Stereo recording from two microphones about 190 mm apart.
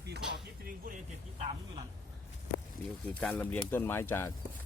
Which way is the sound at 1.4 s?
35° right (ahead or behind).